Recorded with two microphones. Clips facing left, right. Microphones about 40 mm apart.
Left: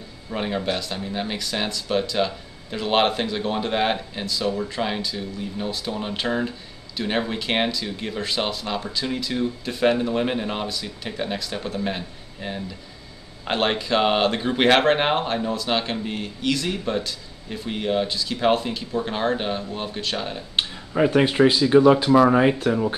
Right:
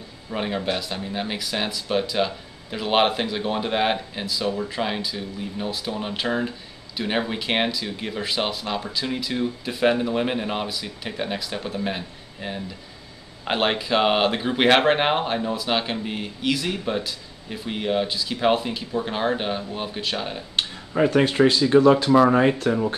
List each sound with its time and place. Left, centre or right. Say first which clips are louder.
0.3 s speech: even; centre
20.7 s speech: even; centre